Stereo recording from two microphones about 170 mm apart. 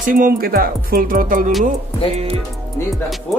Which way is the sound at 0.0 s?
55° right (ahead or behind).